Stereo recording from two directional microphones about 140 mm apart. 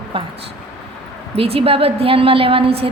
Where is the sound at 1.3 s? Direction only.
45° right (ahead or behind).